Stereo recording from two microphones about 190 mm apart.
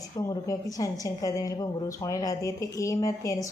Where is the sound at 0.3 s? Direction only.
20° left (ahead or behind).